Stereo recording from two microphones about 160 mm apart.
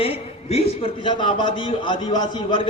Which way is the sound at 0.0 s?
40° left (ahead or behind).